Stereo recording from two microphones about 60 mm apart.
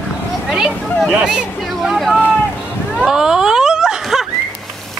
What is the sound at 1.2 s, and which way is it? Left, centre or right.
Speech, centre.